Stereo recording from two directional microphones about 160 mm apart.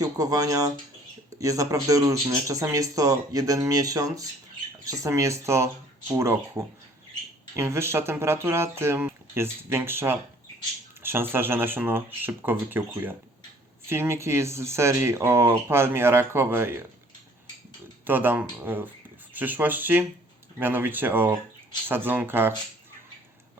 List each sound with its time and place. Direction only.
0.0 s speech: 20° right (ahead or behind)
18.0 s speech: 10° right (ahead or behind)